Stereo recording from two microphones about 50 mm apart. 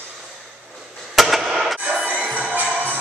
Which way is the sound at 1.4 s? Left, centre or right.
Centre.